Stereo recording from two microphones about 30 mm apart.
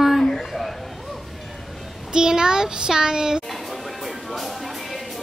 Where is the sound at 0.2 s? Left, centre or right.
Centre.